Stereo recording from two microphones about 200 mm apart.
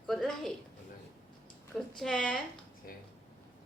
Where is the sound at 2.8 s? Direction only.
45° left (ahead or behind).